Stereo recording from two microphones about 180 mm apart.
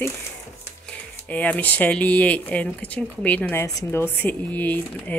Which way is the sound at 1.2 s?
10° left (ahead or behind).